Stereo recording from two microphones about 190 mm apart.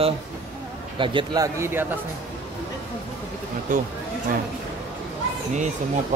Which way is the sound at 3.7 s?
45° right (ahead or behind).